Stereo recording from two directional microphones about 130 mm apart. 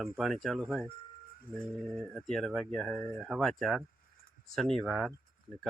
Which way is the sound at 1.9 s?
Centre (ahead or behind).